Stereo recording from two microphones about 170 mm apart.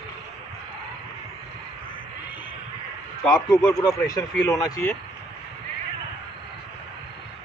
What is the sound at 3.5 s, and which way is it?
Speech, 20° left (ahead or behind).